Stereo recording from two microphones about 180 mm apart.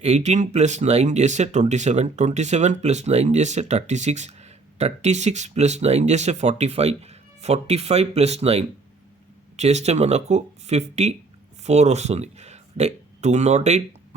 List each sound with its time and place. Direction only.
0.0 s speech: 40° right (ahead or behind)